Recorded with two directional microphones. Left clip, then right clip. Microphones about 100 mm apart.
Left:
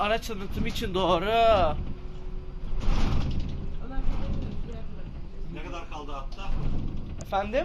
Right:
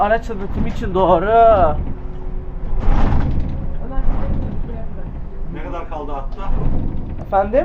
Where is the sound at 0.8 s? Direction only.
35° left (ahead or behind).